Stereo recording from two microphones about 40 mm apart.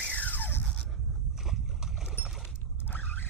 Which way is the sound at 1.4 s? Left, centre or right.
Centre.